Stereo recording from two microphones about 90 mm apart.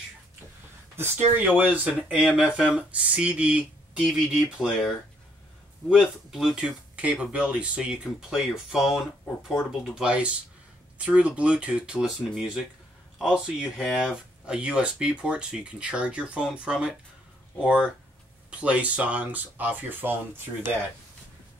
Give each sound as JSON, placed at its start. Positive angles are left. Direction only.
{"t": 0.9, "sound": "speech", "side_deg": -25}
{"t": 5.9, "sound": "speech", "side_deg": -5}
{"t": 13.7, "sound": "speech", "side_deg": 5}
{"t": 14.0, "sound": "speech", "side_deg": -10}